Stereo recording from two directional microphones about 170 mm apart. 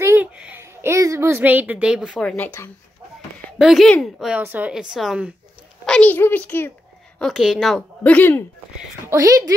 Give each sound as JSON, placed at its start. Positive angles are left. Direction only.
{"t": 0.0, "sound": "a sound", "side_deg": -10}
{"t": 3.5, "sound": "a woman's voice", "side_deg": 0}
{"t": 5.9, "sound": "a child's voice", "side_deg": 10}
{"t": 7.2, "sound": "a woman's voice", "side_deg": 0}
{"t": 9.0, "sound": "a woman's voice", "side_deg": -20}